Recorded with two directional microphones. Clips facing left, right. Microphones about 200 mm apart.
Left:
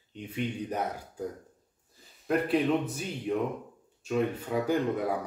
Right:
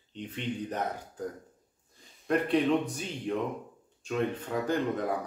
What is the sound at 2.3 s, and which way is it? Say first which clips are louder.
A man's voice: even; 5° left (ahead or behind).